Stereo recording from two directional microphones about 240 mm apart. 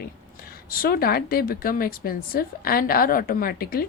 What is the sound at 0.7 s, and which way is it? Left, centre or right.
A woman's voice, left.